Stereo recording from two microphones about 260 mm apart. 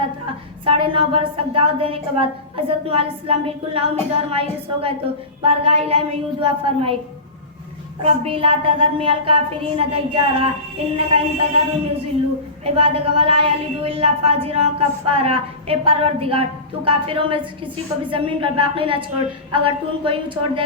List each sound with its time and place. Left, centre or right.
0.6 s a woman's voice: centre
8.0 s a woman's voice: right